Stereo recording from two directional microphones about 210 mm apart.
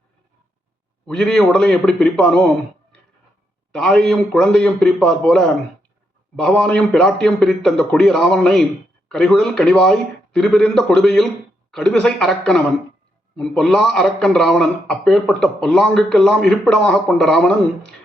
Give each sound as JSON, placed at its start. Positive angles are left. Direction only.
{"t": 1.0, "sound": "a man's voice", "side_deg": 5}
{"t": 3.7, "sound": "a man's voice", "side_deg": 5}